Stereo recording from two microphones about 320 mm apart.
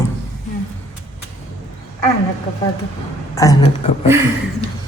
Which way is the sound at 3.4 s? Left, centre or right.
Centre.